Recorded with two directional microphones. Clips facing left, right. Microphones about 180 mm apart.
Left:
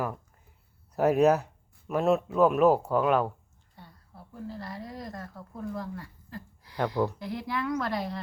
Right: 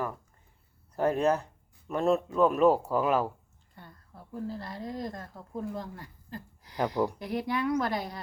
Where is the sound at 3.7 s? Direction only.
50° right (ahead or behind).